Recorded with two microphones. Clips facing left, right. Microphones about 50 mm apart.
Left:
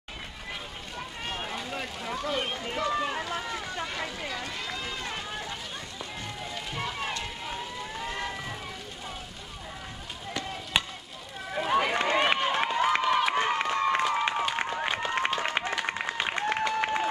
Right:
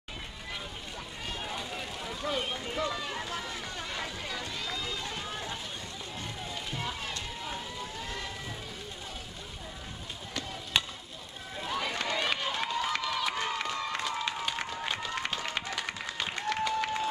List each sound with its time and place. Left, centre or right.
1.2 s a sound: left
4.4 s run: left
6.7 s music: left
10.8 s chop: centre
11.5 s run: left
14.5 s applause: left